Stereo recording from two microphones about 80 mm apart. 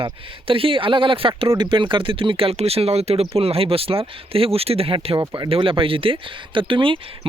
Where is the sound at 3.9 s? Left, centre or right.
Right.